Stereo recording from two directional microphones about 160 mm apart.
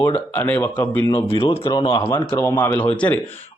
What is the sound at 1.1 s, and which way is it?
Speech, 35° left (ahead or behind).